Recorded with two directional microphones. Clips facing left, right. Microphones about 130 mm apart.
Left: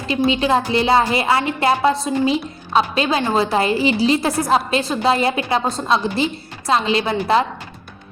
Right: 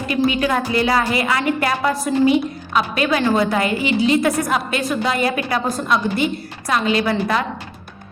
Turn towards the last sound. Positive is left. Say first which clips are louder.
# left 2 dB
turn(degrees=25)  # may be behind; listen again after turning